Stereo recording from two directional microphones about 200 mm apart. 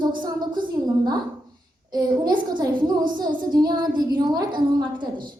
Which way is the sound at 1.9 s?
20° right (ahead or behind).